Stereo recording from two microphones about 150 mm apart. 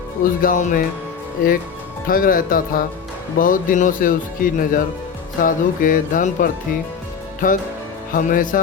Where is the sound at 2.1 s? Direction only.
70° left (ahead or behind).